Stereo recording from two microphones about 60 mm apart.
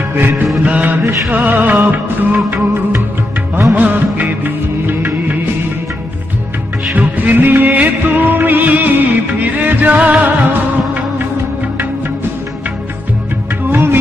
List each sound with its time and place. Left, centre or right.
0.2 s music: right
0.6 s music of bollywood: right
6.9 s music: right
13.7 s music of bollywood: right